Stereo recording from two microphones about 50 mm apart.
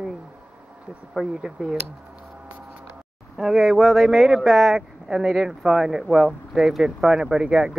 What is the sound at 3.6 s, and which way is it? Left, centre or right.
Speech, centre.